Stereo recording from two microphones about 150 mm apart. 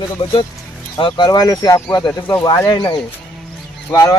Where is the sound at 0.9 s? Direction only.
30° left (ahead or behind).